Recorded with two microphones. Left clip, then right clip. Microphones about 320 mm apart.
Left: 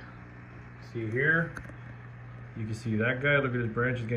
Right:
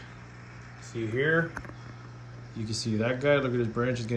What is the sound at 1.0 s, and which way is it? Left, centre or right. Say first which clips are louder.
Speech: even; centre.